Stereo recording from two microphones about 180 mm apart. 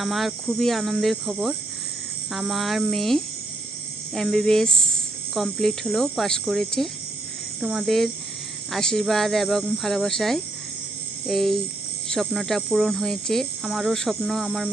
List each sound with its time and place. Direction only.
0.0 s speech: centre (ahead or behind)